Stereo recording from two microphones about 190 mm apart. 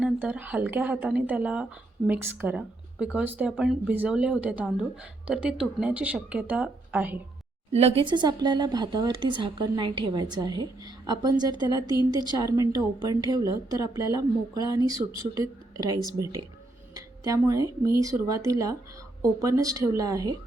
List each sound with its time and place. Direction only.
0.0 s speech: 10° right (ahead or behind)
7.7 s speech: 35° right (ahead or behind)
11.9 s a woman's voice: 25° left (ahead or behind)
12.4 s speech: 15° right (ahead or behind)